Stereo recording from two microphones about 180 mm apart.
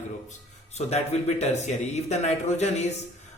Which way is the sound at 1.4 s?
40° left (ahead or behind).